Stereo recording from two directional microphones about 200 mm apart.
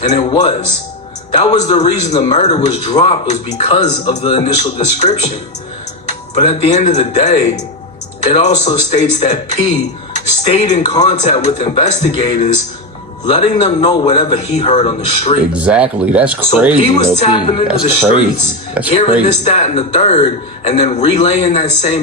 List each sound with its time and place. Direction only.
0.0 s a man's voice: 35° left (ahead or behind)
15.5 s speech: 5° right (ahead or behind)
16.8 s speech: 25° left (ahead or behind)
19.3 s a man's voice: 35° left (ahead or behind)